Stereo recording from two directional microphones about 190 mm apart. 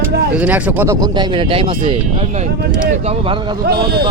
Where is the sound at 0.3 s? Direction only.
10° right (ahead or behind).